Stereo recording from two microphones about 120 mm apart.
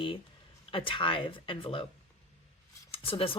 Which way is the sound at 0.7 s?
45° left (ahead or behind).